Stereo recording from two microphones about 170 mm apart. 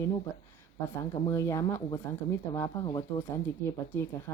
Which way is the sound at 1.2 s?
15° left (ahead or behind).